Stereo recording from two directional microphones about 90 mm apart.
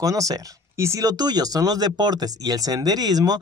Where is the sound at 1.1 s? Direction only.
50° right (ahead or behind).